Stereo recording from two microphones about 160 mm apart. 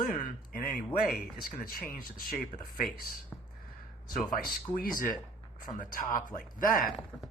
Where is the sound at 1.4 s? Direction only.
65° left (ahead or behind).